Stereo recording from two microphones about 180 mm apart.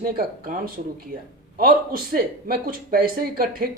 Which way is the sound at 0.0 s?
50° right (ahead or behind).